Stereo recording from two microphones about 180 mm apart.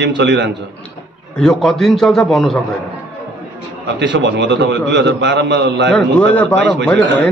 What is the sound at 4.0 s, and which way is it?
A man's voice, 80° right.